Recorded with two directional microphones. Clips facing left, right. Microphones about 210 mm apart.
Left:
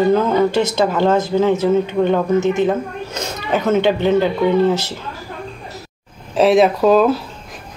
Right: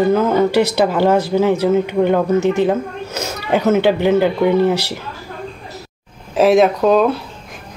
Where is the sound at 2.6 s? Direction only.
10° right (ahead or behind).